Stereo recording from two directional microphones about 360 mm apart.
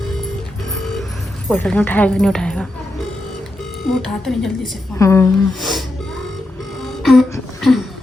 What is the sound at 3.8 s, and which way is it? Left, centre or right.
A woman's voice, centre.